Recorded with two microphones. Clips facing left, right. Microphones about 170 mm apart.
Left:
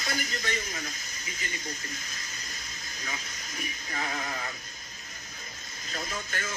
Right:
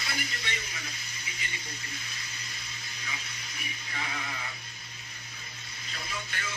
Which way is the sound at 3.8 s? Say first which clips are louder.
Left 4 dB; 45° left (ahead or behind).